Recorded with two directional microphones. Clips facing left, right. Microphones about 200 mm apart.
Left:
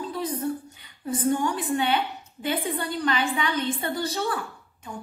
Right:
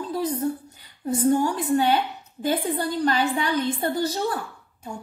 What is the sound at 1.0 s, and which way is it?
Speech, 40° right (ahead or behind).